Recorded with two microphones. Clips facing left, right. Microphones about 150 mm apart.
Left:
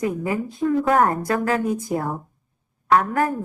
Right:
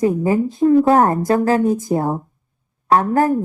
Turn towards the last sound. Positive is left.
turn(degrees=-30)  # may be behind; listen again after turning